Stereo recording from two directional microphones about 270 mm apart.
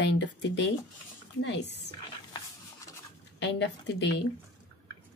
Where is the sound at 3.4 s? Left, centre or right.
Left.